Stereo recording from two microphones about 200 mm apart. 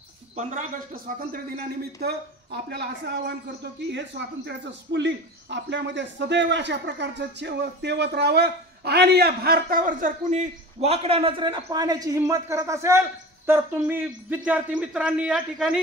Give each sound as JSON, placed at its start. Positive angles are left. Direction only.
{"t": 0.4, "sound": "a man's voice", "side_deg": -45}